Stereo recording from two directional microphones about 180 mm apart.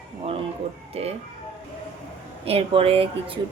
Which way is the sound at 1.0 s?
35° right (ahead or behind).